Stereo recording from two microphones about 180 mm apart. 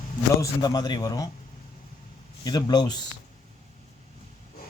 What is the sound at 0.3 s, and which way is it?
Speech, 20° left (ahead or behind).